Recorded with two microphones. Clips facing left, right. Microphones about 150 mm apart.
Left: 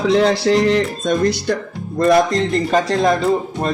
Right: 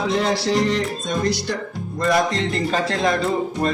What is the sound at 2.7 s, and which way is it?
Speech, 40° left (ahead or behind).